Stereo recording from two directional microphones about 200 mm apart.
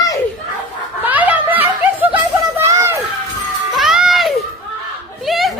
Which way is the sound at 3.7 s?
Centre (ahead or behind).